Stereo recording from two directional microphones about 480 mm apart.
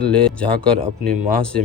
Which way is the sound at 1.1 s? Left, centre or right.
Centre.